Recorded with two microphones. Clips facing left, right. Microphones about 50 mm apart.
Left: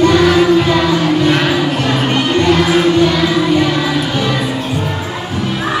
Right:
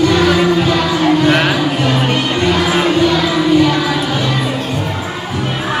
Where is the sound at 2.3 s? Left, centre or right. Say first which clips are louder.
Left 4 dB; centre.